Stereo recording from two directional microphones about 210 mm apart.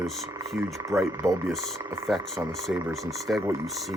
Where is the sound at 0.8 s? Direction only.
15° right (ahead or behind).